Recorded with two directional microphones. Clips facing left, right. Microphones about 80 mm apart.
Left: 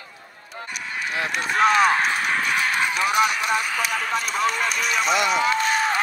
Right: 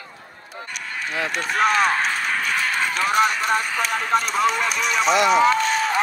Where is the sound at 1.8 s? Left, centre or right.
Centre.